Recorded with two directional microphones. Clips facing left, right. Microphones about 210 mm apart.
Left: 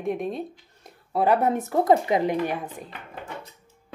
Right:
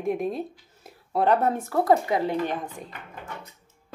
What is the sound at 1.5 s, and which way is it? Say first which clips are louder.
A woman's voice: left 1 dB; 20° left (ahead or behind).